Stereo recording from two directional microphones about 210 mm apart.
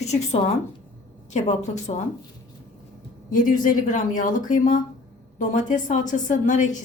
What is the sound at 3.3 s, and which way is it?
A woman's voice, 40° left (ahead or behind).